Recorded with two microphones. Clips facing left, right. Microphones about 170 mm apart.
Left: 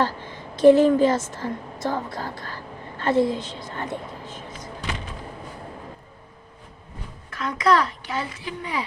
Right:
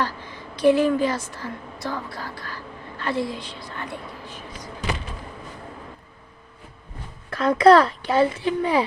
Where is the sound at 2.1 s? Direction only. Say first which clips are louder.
Left 2 dB; 20° left (ahead or behind).